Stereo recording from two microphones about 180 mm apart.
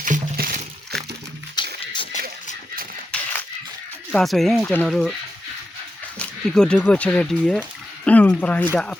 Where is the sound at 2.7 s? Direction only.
55° right (ahead or behind).